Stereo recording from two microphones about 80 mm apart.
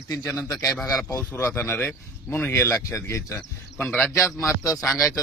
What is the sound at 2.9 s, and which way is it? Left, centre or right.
Speech, left.